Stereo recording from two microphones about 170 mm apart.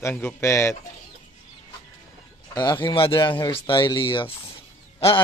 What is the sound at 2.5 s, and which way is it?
Speech, 25° left (ahead or behind).